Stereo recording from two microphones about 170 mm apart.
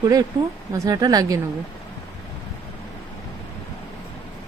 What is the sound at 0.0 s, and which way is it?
Speech, 20° right (ahead or behind).